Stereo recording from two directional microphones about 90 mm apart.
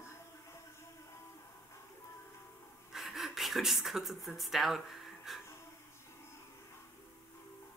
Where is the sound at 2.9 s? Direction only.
Centre (ahead or behind).